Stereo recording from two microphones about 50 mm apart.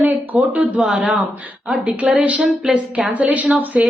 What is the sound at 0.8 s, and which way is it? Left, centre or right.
A man's voice, centre.